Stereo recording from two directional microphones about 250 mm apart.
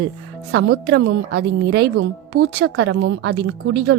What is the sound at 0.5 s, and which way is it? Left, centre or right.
A woman's voice, right.